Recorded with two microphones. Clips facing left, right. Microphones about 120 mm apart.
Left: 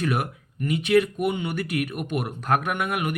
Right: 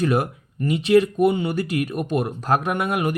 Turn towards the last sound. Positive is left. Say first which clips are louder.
# right 4 dB
turn(degrees=-30)  # may be behind; listen again after turning